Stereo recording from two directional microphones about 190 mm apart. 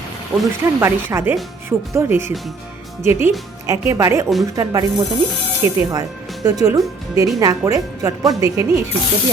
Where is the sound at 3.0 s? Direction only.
10° right (ahead or behind).